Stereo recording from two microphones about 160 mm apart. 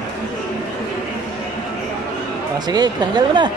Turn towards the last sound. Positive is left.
turn(degrees=-25)  # may be behind; listen again after turning